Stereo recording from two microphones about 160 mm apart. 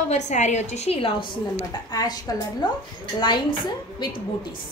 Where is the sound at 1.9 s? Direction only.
25° left (ahead or behind).